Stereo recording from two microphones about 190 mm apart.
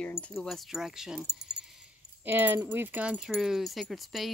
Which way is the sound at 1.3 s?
60° right (ahead or behind).